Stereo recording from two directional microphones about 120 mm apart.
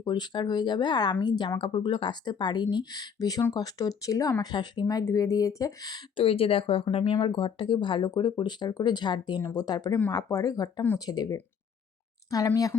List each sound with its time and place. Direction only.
0.0 s speech: 35° left (ahead or behind)
6.2 s speech: 50° left (ahead or behind); by 11.3 s 35° left (ahead or behind)